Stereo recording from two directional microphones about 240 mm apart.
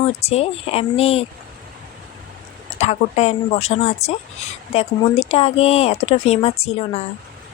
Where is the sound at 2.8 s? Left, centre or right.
Left.